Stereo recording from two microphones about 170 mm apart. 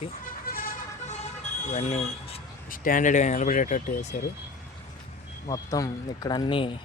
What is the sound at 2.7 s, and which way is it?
A man's voice, 55° left (ahead or behind).